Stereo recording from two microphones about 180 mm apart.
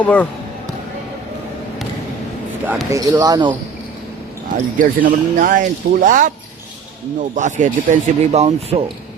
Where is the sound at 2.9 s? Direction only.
20° right (ahead or behind).